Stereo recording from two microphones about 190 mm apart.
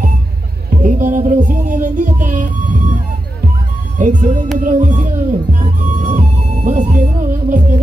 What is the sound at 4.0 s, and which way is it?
Music, 40° right (ahead or behind).